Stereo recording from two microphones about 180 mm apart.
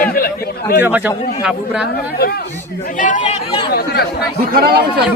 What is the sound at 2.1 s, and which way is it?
Speech, 60° left (ahead or behind).